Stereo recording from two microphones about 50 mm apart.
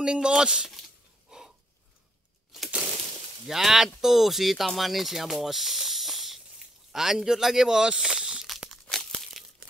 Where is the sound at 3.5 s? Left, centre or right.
Centre.